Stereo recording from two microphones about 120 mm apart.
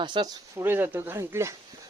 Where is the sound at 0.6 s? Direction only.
15° right (ahead or behind).